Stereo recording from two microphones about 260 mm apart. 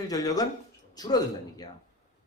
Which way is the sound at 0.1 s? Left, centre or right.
Centre.